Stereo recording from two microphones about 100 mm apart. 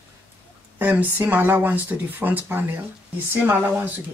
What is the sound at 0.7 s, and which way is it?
Speech, 20° right (ahead or behind).